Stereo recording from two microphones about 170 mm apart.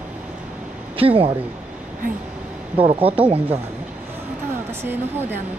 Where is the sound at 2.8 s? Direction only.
35° right (ahead or behind).